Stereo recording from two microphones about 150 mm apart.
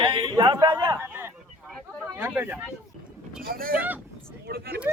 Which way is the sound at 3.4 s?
75° right (ahead or behind).